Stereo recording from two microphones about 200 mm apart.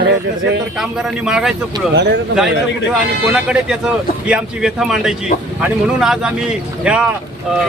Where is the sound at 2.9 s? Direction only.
5° right (ahead or behind).